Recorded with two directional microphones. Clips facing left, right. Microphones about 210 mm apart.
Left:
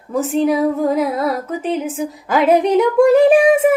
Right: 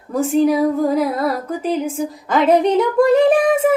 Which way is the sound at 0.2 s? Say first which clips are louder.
Right 1 dB; centre (ahead or behind).